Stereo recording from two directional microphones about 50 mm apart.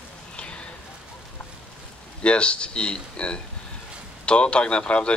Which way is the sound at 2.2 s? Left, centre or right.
Left.